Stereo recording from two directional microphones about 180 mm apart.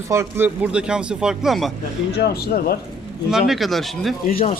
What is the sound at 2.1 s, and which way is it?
Speech, 60° left (ahead or behind).